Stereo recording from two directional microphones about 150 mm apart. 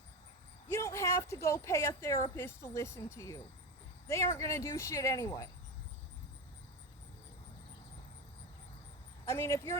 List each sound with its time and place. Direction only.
0.7 s speech: 20° left (ahead or behind)
9.2 s speech: 20° left (ahead or behind)